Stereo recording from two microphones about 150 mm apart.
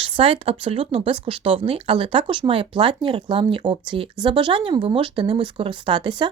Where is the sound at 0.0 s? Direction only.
35° right (ahead or behind).